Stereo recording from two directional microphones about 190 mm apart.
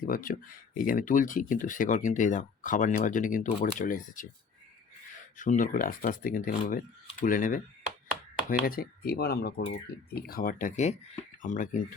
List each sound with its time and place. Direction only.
0.0 s speech: 50° left (ahead or behind)
5.4 s speech: 45° left (ahead or behind)